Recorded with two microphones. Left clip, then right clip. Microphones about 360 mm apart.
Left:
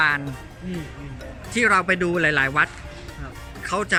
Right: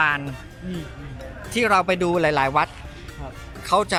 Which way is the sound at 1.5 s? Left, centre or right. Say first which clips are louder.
Even; centre.